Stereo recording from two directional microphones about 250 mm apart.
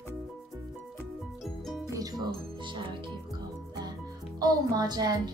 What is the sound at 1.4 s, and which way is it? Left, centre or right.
Music, centre.